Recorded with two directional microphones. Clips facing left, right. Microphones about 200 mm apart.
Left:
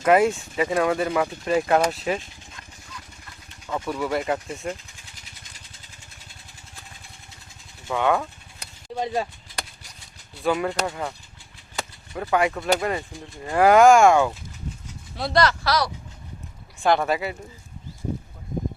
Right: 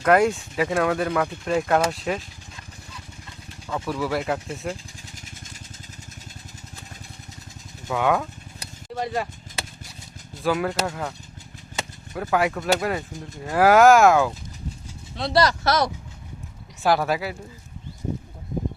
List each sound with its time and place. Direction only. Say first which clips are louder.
0.0 s speech: even; 5° left (ahead or behind)
3.7 s speech: even; centre (ahead or behind)
5.1 s vehicle: right 7 dB; 45° right (ahead or behind)
7.9 s speech: even; 5° right (ahead or behind)
9.0 s a sound: left 1 dB; centre (ahead or behind)
10.4 s speech: even; centre (ahead or behind)
16.8 s speech: even; 5° right (ahead or behind)